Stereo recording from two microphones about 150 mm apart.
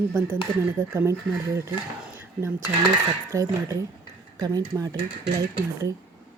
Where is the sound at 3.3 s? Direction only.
20° right (ahead or behind).